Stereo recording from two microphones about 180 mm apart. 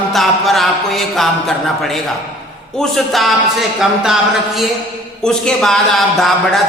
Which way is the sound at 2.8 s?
Centre (ahead or behind).